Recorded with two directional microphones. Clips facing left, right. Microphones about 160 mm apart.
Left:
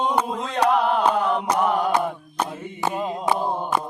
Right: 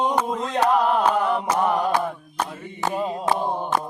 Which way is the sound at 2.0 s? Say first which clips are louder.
Left 1 dB; 5° left (ahead or behind).